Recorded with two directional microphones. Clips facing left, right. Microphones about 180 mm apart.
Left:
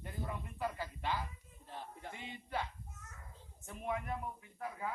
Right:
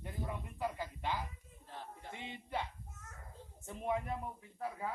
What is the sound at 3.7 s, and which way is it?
Speech, 25° right (ahead or behind).